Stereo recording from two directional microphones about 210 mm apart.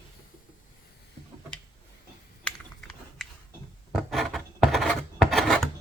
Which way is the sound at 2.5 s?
Centre (ahead or behind).